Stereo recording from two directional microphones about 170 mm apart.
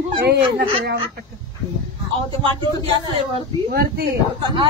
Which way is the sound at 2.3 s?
30° right (ahead or behind).